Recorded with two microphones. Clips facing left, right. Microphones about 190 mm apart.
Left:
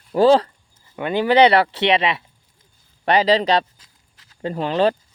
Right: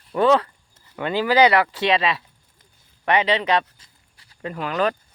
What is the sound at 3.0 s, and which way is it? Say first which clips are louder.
A man's voice: left 4 dB; 35° left (ahead or behind).